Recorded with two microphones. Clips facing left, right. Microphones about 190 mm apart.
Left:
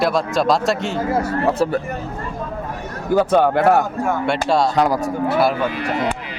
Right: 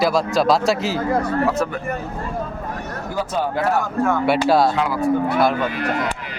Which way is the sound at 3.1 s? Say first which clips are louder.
Left 8 dB; 60° left (ahead or behind).